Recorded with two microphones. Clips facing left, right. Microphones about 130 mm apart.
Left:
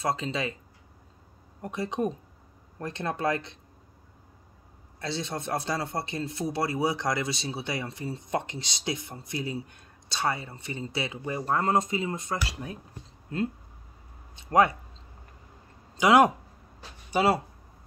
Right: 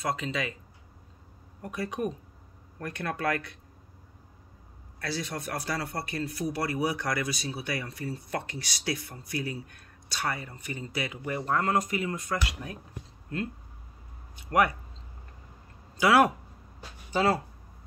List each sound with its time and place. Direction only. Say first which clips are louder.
0.0 s a man's voice: left 2 dB; 30° left (ahead or behind)
1.6 s a man's voice: left 2 dB; 25° left (ahead or behind)
5.0 s a man's voice: left 1 dB; 25° left (ahead or behind)
14.3 s speech: left 3 dB; 25° left (ahead or behind)
16.0 s a man's voice: left 2 dB; 20° left (ahead or behind)